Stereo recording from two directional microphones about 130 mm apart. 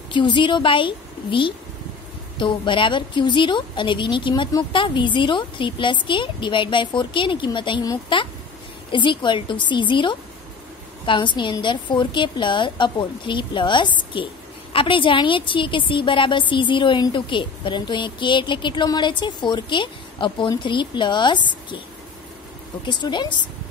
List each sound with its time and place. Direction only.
0.1 s speech: 35° left (ahead or behind)
22.8 s speech: 35° left (ahead or behind)